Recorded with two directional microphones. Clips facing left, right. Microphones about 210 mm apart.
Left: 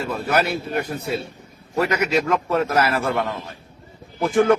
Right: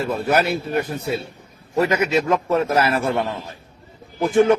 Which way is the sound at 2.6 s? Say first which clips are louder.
Right 1 dB; 25° right (ahead or behind).